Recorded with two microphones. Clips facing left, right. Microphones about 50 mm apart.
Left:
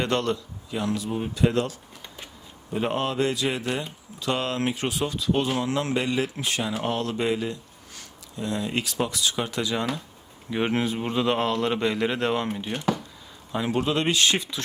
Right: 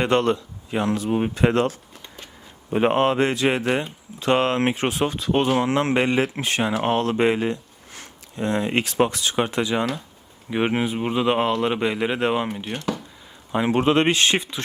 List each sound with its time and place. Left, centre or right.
0.0 s speech: right; by 12.8 s centre
13.5 s speech: right